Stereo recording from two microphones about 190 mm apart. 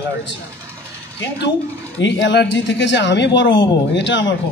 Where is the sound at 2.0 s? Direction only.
70° left (ahead or behind).